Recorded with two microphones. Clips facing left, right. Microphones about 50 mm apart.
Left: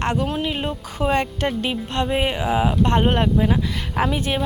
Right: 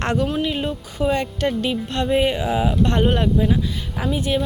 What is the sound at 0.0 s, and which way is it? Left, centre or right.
Speech, centre.